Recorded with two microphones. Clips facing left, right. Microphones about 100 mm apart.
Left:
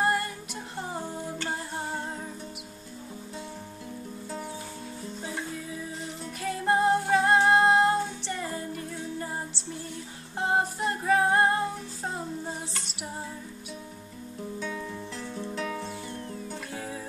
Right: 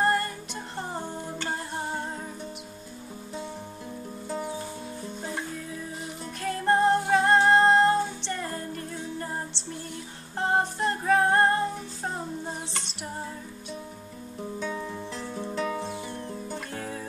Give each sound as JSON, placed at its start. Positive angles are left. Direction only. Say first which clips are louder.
{"t": 0.0, "sound": "music", "louder": "right 2 dB", "side_deg": 5}
{"t": 6.4, "sound": "music", "louder": "right 2 dB", "side_deg": 5}
{"t": 15.5, "sound": "music", "louder": "right 4 dB", "side_deg": -5}
{"t": 15.8, "sound": "music", "louder": "right 2 dB", "side_deg": -20}
{"t": 16.4, "sound": "music", "louder": "right 2 dB", "side_deg": 5}